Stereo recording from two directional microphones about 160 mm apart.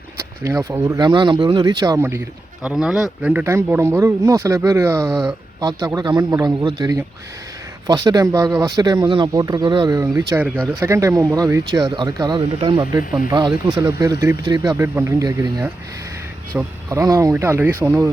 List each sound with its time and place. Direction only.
0.4 s speech: 15° right (ahead or behind)
2.6 s speech: 5° right (ahead or behind)